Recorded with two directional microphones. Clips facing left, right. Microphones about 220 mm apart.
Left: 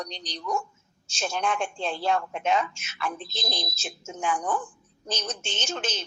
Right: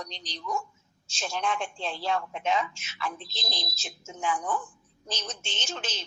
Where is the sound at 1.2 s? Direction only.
50° left (ahead or behind).